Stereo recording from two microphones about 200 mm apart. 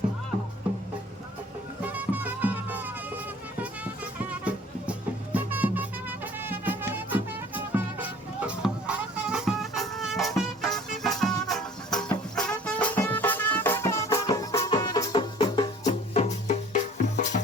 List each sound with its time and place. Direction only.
1.8 s music: 10° right (ahead or behind); by 17.4 s 35° left (ahead or behind)